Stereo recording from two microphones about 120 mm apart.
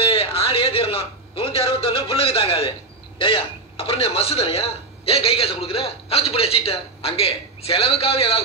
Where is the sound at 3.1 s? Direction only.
45° left (ahead or behind).